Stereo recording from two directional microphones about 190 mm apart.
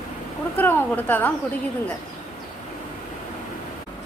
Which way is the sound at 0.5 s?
10° left (ahead or behind).